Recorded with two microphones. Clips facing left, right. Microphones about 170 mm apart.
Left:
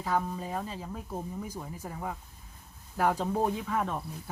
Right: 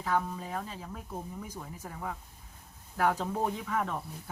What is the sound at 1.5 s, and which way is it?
A woman's voice, 10° left (ahead or behind).